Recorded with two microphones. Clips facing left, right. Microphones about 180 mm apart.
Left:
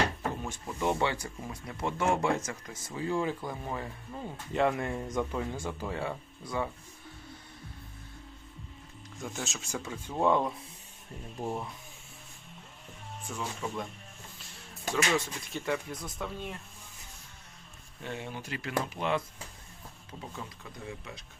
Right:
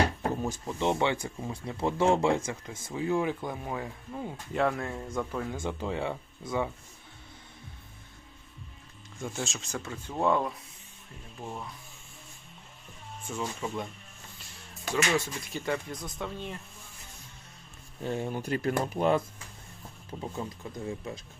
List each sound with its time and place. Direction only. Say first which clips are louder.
0.2 s drawer open or close: right 4 dB; 40° right (ahead or behind)
0.8 s speech: right 2 dB; 20° right (ahead or behind)
4.5 s speech: left 1 dB; centre (ahead or behind)
5.5 s speech: right 3 dB; 20° right (ahead or behind)
9.2 s speech: right 3 dB; centre (ahead or behind)
11.4 s speech: left 4 dB; 25° left (ahead or behind)
13.3 s speech: right 2 dB; 5° right (ahead or behind)
14.8 s speech: right 1 dB; centre (ahead or behind)
18.0 s speech: right 7 dB; 40° right (ahead or behind)
20.4 s speech: right 9 dB; 30° right (ahead or behind)